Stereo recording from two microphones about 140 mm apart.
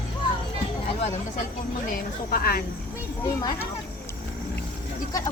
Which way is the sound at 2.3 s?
90° left.